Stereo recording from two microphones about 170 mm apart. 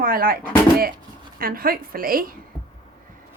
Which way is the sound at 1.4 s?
60° right (ahead or behind).